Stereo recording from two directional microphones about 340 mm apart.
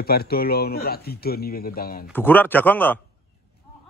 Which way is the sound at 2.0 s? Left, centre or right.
Centre.